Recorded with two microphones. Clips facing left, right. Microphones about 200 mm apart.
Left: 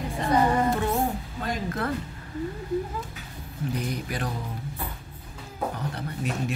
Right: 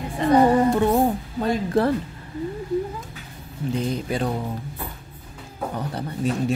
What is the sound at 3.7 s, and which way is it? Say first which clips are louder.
Mantra: right 8 dB; 25° right (ahead or behind).